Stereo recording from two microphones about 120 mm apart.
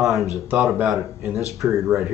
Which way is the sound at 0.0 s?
Centre (ahead or behind).